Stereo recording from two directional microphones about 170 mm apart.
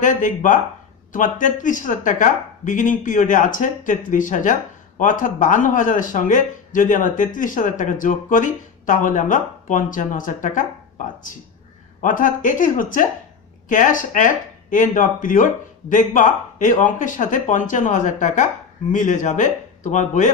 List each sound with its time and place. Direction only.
0.0 s a man's voice: 50° left (ahead or behind)